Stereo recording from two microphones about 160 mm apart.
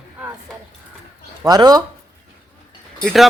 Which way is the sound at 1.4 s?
25° right (ahead or behind).